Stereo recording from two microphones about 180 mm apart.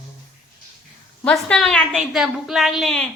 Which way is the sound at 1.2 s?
5° left (ahead or behind).